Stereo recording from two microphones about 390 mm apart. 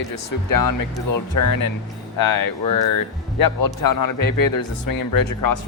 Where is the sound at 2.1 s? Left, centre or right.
Left.